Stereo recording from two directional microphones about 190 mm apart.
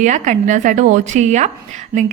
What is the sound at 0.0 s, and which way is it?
A woman's voice, 40° right (ahead or behind).